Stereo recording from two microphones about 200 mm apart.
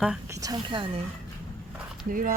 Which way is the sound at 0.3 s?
15° right (ahead or behind).